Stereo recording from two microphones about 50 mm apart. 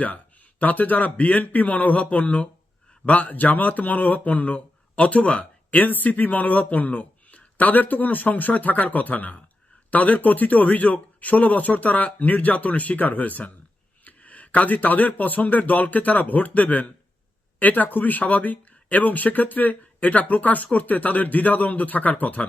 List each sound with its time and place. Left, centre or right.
0.6 s speech: left